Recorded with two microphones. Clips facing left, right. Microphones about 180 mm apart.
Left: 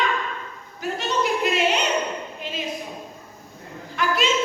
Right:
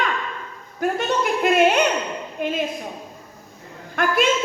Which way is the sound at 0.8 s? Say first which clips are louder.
Right 3 dB; 50° right (ahead or behind).